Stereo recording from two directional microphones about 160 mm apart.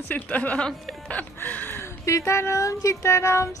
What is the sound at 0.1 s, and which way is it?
Speech, 10° left (ahead or behind).